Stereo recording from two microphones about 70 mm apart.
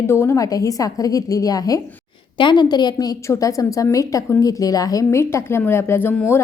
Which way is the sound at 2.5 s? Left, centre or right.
Left.